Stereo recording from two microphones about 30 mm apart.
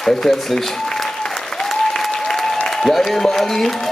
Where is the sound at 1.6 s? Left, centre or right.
Centre.